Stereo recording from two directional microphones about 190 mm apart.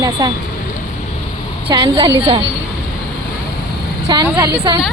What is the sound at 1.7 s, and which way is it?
Speech, 25° right (ahead or behind).